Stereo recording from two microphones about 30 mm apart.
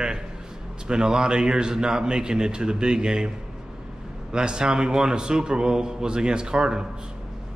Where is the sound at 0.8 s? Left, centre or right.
Right.